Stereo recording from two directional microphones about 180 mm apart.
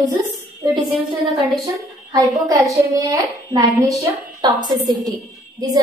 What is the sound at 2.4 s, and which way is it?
A child's voice, 20° right (ahead or behind).